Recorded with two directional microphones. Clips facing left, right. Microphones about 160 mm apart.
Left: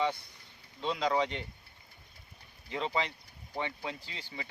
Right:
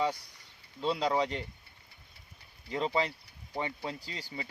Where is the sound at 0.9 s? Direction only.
35° right (ahead or behind).